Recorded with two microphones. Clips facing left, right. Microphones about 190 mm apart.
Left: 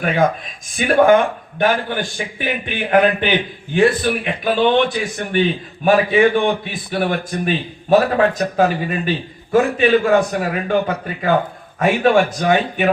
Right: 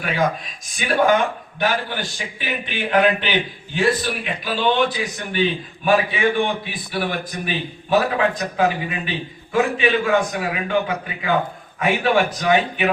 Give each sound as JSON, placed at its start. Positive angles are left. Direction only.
{"t": 0.8, "sound": "a man's voice", "side_deg": 55}